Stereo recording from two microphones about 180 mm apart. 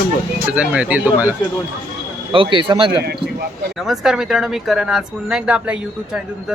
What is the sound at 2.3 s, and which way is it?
Speech, 30° right (ahead or behind).